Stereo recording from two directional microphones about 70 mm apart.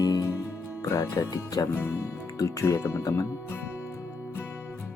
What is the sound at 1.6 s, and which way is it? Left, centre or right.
Speech, left.